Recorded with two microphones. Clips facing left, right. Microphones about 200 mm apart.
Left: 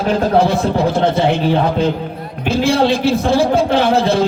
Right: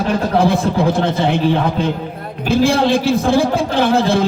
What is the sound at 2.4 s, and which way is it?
A man's voice, 55° right (ahead or behind).